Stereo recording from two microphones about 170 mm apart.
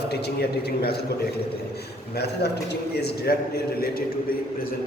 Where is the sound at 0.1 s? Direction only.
70° left (ahead or behind).